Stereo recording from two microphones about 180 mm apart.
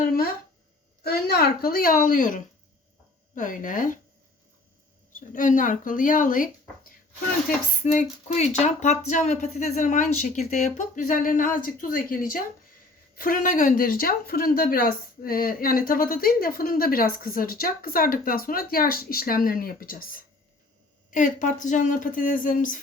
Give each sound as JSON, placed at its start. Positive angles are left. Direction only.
{"t": 1.0, "sound": "speech", "side_deg": 60}
{"t": 5.1, "sound": "speech", "side_deg": 45}